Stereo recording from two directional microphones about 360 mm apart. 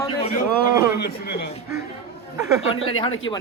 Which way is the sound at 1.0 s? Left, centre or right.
Left.